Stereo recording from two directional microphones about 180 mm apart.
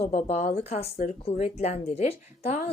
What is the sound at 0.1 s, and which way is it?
Speech, 40° left (ahead or behind).